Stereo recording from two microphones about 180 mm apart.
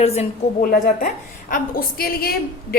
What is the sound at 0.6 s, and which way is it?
A woman's voice, 50° left (ahead or behind).